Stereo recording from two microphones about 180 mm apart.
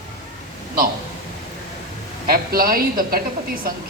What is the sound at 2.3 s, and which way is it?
Speech, 55° right (ahead or behind).